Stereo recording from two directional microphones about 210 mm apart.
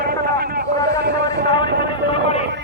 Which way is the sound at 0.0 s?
45° right (ahead or behind).